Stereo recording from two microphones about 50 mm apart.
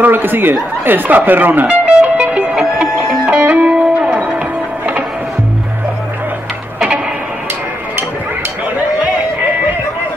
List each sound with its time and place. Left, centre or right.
0.0 s speech: right
1.9 s music: centre